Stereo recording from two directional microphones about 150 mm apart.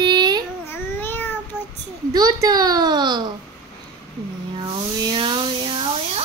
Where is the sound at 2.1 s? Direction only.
25° right (ahead or behind).